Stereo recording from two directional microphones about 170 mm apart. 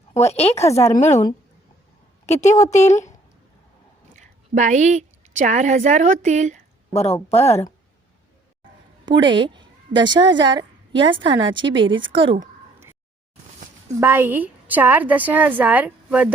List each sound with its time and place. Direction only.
0.1 s a woman's voice: 40° left (ahead or behind)
4.1 s a woman's voice: 45° right (ahead or behind)
6.9 s a woman's voice: 40° left (ahead or behind)
7.3 s speech: 15° left (ahead or behind)
9.0 s a woman's voice: 25° right (ahead or behind)
14.0 s a woman's voice: 10° right (ahead or behind)